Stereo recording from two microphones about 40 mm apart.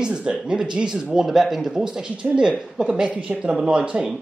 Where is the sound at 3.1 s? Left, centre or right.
Right.